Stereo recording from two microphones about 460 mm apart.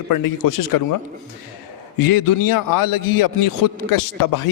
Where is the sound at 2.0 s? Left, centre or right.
Left.